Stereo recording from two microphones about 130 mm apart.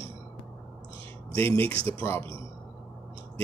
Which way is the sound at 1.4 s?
15° left (ahead or behind).